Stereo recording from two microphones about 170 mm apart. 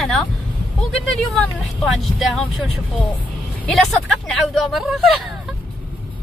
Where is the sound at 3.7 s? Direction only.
5° left (ahead or behind).